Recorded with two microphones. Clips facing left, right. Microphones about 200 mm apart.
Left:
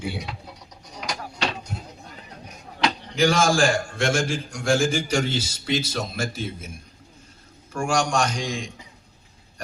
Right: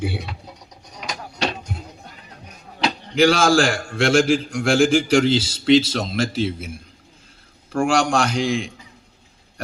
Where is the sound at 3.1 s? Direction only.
65° right (ahead or behind); by 6.5 s 90° right.